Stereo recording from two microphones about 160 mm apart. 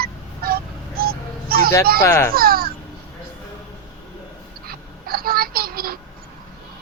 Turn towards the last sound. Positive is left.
turn(degrees=-65)  # may be behind; listen again after turning